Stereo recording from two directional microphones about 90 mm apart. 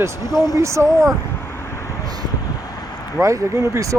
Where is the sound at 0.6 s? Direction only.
35° right (ahead or behind).